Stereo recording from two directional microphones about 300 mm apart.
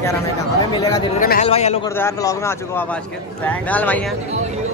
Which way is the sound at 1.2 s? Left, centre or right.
Left.